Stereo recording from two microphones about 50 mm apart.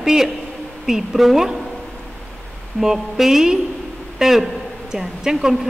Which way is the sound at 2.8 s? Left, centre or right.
Centre.